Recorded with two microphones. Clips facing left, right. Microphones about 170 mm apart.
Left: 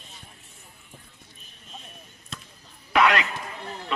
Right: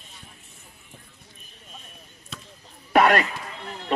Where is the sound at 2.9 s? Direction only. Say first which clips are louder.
Right 3 dB; 45° right (ahead or behind).